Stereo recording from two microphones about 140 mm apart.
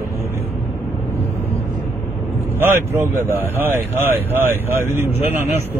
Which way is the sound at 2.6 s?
15° right (ahead or behind).